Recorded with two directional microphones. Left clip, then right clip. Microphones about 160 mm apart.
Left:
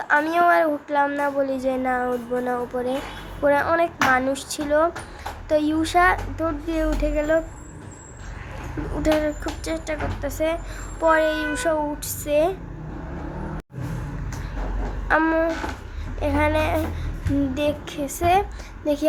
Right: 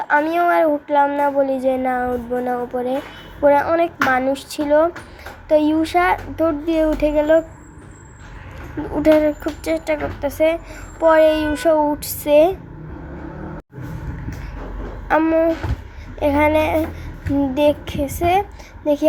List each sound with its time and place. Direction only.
0.0 s child singing: 15° right (ahead or behind)
5.5 s a child's voice: 15° right (ahead or behind)
9.0 s a child's voice: 20° right (ahead or behind)
15.0 s a sound: 15° right (ahead or behind)
16.2 s a child's voice: 25° right (ahead or behind)
18.8 s child singing: 10° right (ahead or behind)